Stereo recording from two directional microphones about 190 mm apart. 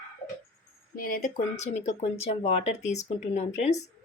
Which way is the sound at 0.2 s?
30° left (ahead or behind).